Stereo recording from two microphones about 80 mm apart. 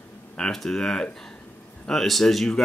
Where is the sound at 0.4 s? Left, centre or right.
Centre.